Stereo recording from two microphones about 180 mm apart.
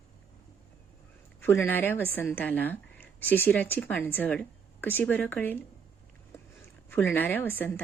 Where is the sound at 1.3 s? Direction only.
15° left (ahead or behind).